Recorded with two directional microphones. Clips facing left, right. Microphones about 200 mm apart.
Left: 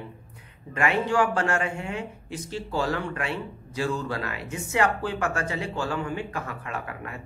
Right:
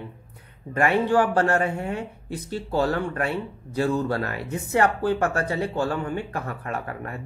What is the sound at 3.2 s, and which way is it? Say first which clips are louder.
Speech: right 4 dB; 50° right (ahead or behind).